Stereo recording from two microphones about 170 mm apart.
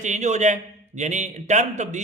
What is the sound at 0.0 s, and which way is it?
A man's voice, 45° right (ahead or behind).